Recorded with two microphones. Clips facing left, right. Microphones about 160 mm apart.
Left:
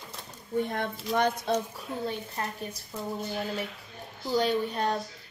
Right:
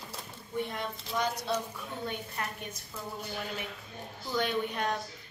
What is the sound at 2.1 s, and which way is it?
Speech, 30° left (ahead or behind).